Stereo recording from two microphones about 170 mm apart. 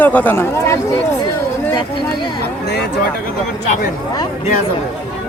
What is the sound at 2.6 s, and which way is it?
Speech, 80° left.